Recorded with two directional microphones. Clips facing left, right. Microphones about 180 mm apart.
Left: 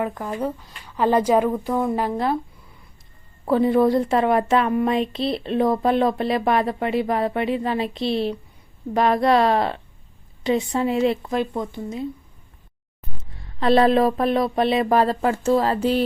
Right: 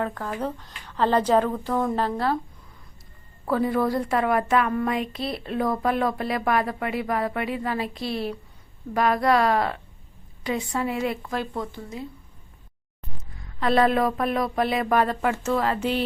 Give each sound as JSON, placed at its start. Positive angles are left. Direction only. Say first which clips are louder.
{"t": 0.0, "sound": "speech", "louder": "left 3 dB", "side_deg": 15}
{"t": 3.4, "sound": "a woman's voice", "louder": "left 6 dB", "side_deg": 25}
{"t": 13.4, "sound": "a woman's voice", "louder": "left 4 dB", "side_deg": 30}